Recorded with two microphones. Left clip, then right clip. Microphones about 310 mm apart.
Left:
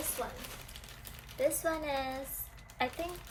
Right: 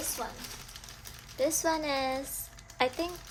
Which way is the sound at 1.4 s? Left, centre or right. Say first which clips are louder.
Right 3 dB; right.